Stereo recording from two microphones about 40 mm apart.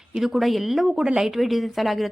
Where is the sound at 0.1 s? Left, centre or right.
Centre.